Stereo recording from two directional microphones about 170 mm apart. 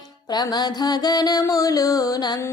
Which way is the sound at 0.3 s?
25° left (ahead or behind).